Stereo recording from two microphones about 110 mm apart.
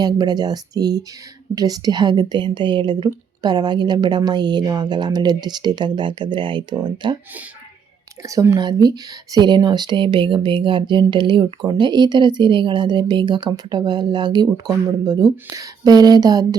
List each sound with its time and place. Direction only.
0.0 s speech: 40° right (ahead or behind)
8.2 s speech: 30° right (ahead or behind)